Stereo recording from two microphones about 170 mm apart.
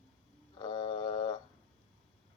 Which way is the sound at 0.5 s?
30° left (ahead or behind).